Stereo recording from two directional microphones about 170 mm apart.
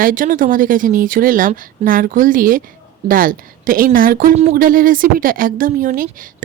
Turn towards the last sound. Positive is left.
turn(degrees=-55)  # may be behind; listen again after turning